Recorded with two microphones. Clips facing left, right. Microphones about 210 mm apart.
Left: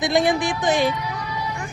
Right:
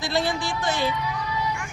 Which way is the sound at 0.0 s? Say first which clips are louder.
Left 6 dB; 15° left (ahead or behind).